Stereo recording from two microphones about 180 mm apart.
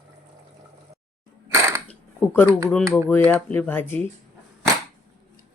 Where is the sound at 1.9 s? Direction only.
10° left (ahead or behind).